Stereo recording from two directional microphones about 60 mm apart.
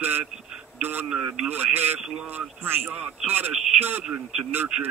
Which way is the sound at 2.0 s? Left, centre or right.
Centre.